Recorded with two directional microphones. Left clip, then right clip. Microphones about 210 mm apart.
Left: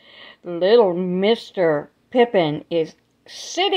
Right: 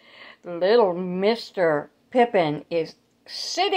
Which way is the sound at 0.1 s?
30° left (ahead or behind).